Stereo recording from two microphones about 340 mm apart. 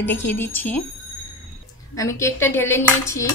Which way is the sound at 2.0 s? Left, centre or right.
Centre.